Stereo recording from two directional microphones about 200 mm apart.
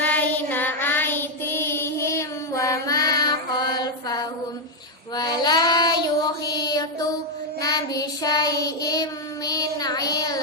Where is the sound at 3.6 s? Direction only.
20° left (ahead or behind).